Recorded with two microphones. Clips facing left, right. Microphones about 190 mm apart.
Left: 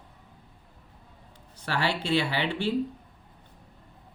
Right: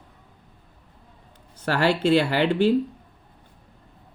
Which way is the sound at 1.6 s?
45° right (ahead or behind).